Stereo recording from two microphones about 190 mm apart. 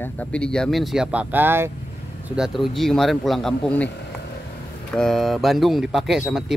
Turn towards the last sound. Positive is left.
turn(degrees=0)  # may be behind; listen again after turning